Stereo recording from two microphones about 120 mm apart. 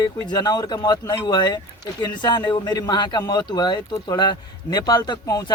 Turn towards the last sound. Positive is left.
turn(degrees=35)  # may be behind; listen again after turning